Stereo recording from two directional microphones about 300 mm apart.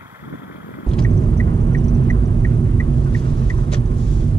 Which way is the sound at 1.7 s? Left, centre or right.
Centre.